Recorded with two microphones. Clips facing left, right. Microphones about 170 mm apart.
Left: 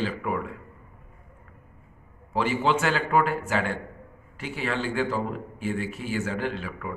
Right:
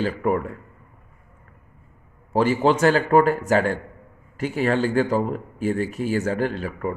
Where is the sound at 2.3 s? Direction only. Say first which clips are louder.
Right 6 dB; 40° right (ahead or behind).